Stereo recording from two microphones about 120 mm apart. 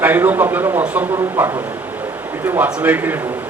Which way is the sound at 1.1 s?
25° right (ahead or behind).